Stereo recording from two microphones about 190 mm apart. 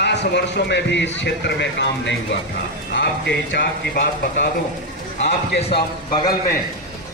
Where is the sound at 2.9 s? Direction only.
65° left (ahead or behind).